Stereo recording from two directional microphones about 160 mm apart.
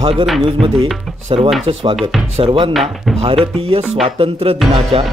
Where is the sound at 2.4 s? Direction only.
30° right (ahead or behind).